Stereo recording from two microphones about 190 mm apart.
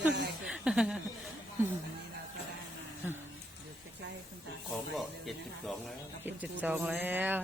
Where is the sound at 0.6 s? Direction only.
5° right (ahead or behind).